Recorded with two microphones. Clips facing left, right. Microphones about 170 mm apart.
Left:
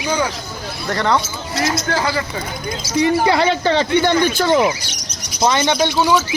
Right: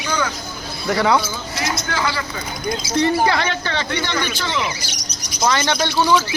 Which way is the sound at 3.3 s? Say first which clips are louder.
Left 6 dB; 30° left (ahead or behind).